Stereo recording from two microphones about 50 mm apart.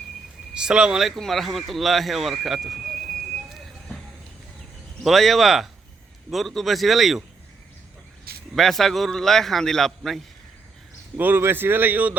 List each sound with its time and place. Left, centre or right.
0.5 s speech: centre
1.1 s speech: centre
5.0 s speech: centre
8.5 s speech: centre
11.2 s a man's voice: right